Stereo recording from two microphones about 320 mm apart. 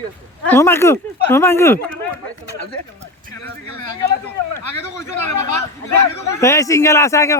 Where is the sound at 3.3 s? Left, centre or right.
Left.